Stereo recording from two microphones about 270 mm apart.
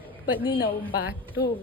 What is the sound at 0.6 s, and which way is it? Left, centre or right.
Speech, left.